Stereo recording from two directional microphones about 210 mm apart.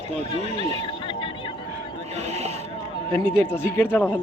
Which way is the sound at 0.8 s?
25° left (ahead or behind).